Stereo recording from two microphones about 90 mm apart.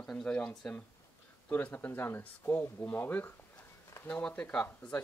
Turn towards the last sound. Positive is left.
turn(degrees=10)  # may be behind; listen again after turning